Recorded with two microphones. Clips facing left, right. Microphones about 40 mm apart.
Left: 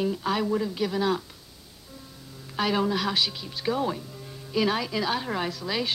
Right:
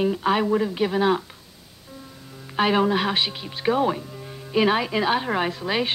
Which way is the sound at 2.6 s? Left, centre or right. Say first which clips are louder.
Right 5 dB; right.